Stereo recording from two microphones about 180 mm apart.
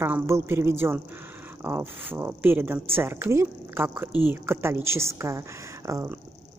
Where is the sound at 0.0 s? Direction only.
15° right (ahead or behind).